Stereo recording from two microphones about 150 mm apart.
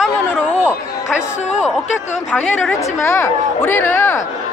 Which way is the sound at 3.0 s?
20° left (ahead or behind).